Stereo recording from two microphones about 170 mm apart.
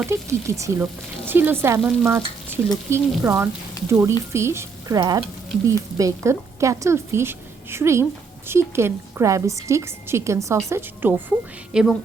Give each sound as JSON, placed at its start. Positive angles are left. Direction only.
{"t": 0.0, "sound": "a woman's voice", "side_deg": -15}
{"t": 11.7, "sound": "a woman's voice", "side_deg": -5}